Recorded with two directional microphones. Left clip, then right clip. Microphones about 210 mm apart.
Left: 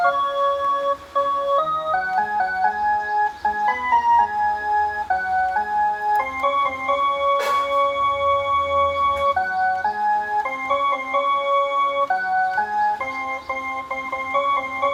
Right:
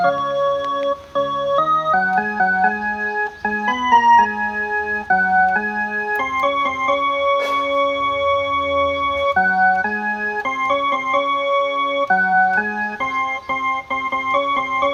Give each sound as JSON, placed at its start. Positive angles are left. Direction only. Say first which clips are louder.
{"t": 3.8, "sound": "music", "louder": "right 6 dB", "side_deg": -40}
{"t": 8.7, "sound": "music", "louder": "right 1 dB", "side_deg": -40}